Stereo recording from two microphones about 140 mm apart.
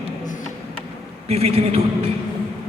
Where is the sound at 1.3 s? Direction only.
45° right (ahead or behind).